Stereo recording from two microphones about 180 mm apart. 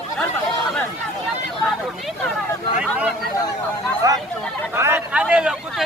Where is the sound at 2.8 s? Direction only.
5° right (ahead or behind).